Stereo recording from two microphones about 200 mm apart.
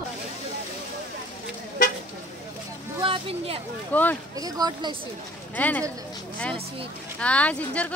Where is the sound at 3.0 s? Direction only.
25° right (ahead or behind).